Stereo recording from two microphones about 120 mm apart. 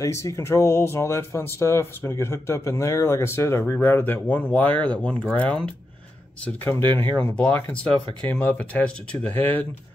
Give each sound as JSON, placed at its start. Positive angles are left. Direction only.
{"t": 0.0, "sound": "speech", "side_deg": 25}
{"t": 7.2, "sound": "speech", "side_deg": 10}